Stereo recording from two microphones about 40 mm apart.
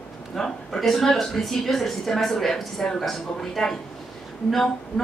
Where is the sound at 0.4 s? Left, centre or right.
Centre.